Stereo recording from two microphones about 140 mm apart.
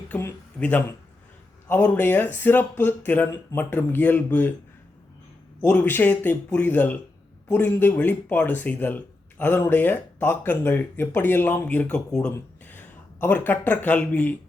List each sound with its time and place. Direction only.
0.1 s speech: 15° left (ahead or behind)
5.5 s speech: 10° left (ahead or behind)